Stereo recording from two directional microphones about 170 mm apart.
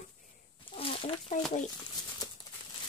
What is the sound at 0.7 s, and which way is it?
Chicken, 30° left (ahead or behind).